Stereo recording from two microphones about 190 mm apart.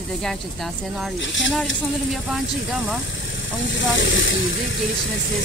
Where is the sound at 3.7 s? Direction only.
75° left (ahead or behind).